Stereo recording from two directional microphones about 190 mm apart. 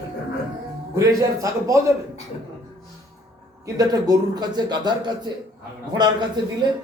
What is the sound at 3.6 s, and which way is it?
A man's voice, 20° right (ahead or behind).